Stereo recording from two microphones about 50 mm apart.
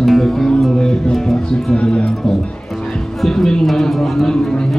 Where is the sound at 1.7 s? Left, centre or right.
Left.